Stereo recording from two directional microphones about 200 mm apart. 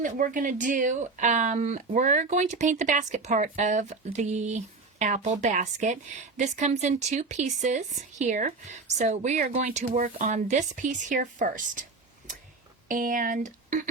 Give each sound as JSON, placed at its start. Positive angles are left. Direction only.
{"t": 0.0, "sound": "speech", "side_deg": -40}
{"t": 12.9, "sound": "speech", "side_deg": -40}